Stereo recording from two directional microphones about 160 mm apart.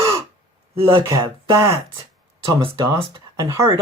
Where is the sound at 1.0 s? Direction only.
20° right (ahead or behind).